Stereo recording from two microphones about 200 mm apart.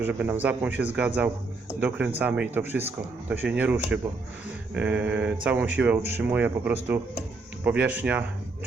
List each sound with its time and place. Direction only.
0.0 s speech: 10° right (ahead or behind)